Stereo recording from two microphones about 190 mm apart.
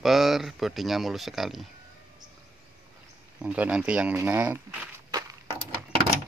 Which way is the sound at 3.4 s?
5° right (ahead or behind).